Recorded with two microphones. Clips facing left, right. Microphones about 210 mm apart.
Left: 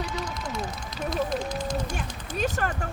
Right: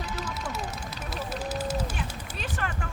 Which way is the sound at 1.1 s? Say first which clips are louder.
Left 4 dB; 5° right (ahead or behind).